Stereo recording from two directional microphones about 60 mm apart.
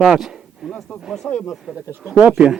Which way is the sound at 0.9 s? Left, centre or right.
Left.